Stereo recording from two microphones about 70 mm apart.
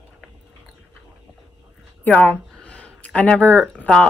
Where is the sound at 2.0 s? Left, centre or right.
Centre.